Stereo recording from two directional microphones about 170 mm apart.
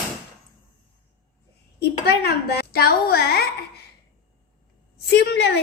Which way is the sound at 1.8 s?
70° left (ahead or behind).